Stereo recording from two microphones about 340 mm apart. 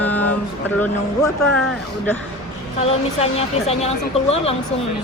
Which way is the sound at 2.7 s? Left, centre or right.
Centre.